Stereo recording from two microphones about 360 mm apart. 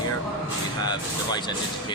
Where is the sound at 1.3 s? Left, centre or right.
Centre.